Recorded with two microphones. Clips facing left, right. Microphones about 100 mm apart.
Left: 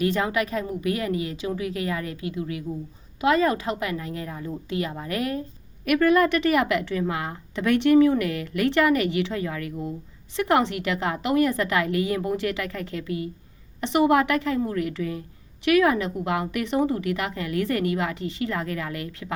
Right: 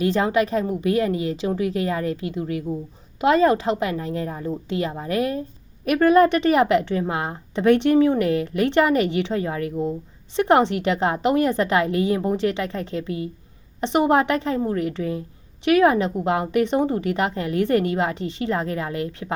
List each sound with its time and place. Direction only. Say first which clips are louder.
0.0 s a woman's voice: right 4 dB; 30° right (ahead or behind)